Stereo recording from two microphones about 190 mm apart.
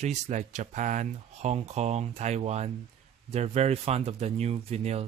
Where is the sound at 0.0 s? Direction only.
40° right (ahead or behind).